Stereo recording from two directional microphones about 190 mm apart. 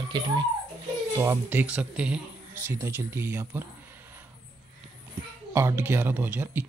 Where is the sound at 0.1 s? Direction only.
25° right (ahead or behind).